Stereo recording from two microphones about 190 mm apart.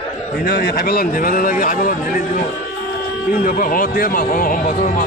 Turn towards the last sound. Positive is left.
turn(degrees=45)  # may be behind; listen again after turning